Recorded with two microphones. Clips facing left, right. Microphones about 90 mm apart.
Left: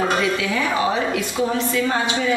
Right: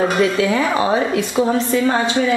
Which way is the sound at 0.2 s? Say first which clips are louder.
Right 5 dB; 35° right (ahead or behind).